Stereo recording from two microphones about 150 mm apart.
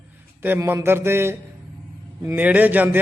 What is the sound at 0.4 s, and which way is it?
Speech, 15° right (ahead or behind).